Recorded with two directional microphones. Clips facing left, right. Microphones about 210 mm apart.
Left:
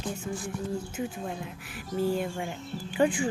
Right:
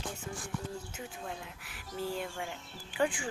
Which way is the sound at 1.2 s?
20° left (ahead or behind).